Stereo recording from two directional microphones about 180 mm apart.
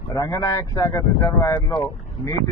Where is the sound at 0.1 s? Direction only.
20° left (ahead or behind).